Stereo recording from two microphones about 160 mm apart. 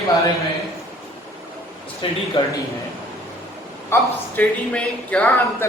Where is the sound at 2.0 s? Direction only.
35° left (ahead or behind).